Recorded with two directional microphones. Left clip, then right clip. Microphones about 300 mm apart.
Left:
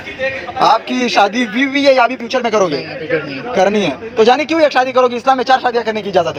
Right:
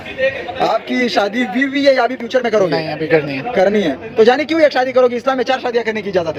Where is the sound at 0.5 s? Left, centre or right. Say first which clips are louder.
Left 6 dB; centre.